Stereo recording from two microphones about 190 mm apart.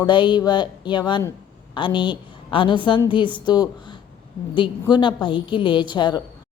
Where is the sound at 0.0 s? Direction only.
25° left (ahead or behind).